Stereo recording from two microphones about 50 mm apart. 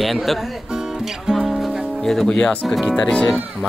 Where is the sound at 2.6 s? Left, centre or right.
Centre.